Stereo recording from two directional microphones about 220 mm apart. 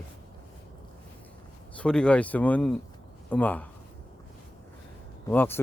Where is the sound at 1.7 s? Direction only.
5° left (ahead or behind).